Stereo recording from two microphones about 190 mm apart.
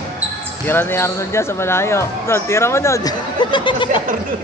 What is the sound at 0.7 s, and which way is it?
Speech, 10° left (ahead or behind).